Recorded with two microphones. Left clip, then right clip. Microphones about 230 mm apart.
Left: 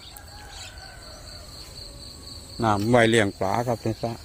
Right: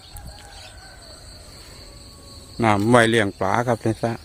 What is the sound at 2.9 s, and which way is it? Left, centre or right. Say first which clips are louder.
Speech: right 1 dB; centre.